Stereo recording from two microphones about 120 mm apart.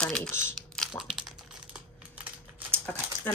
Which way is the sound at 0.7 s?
5° right (ahead or behind).